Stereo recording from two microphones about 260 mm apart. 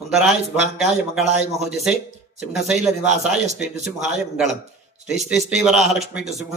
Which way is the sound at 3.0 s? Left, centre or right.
Right.